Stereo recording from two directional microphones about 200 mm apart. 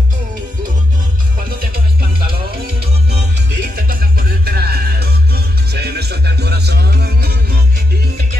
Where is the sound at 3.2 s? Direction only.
50° right (ahead or behind).